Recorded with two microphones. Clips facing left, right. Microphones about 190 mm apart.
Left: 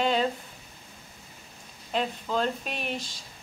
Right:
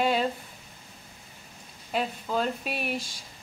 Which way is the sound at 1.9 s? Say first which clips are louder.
Even; 5° right (ahead or behind).